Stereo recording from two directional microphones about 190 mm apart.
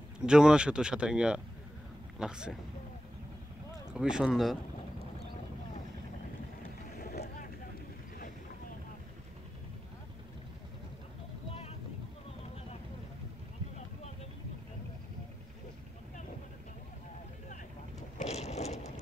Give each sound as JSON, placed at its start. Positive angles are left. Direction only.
{"t": 0.2, "sound": "speech", "side_deg": -5}
{"t": 3.9, "sound": "speech", "side_deg": -5}
{"t": 7.0, "sound": "boat", "side_deg": 55}
{"t": 18.1, "sound": "a sound", "side_deg": 35}